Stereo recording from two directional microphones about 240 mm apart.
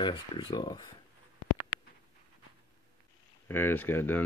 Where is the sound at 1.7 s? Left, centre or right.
Left.